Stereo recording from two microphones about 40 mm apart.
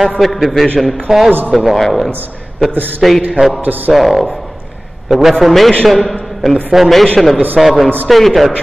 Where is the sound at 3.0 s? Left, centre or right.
Centre.